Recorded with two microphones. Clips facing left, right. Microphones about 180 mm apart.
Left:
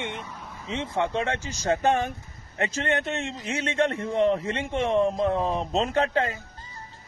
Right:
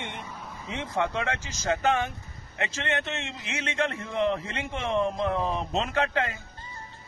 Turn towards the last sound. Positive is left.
turn(degrees=35)  # may be behind; listen again after turning